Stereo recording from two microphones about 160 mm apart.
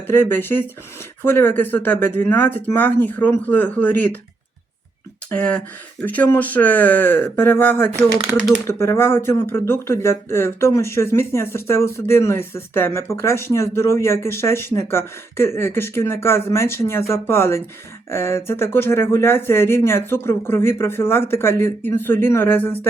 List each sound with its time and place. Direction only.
0.1 s speech: 15° left (ahead or behind)
5.3 s speech: 10° left (ahead or behind)
7.9 s speech: 15° right (ahead or behind)
8.6 s speech: 15° left (ahead or behind)